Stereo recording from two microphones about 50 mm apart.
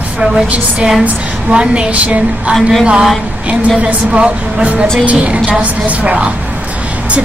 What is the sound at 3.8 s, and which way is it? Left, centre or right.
Speech, right.